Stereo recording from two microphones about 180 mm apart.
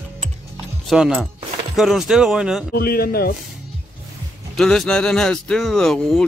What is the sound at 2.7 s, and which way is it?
Speech, 55° left (ahead or behind).